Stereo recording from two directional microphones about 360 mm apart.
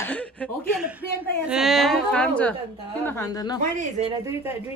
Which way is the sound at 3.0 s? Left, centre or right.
Centre.